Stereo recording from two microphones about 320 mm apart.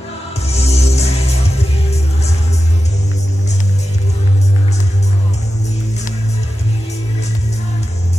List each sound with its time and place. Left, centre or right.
0.5 s music: centre